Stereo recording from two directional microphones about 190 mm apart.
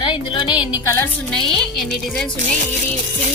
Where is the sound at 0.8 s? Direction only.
15° left (ahead or behind).